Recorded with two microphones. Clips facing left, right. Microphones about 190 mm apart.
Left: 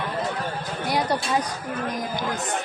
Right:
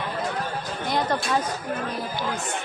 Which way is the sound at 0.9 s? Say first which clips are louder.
Left 1 dB; 10° left (ahead or behind).